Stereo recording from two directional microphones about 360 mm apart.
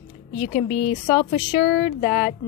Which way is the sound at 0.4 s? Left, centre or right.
Centre.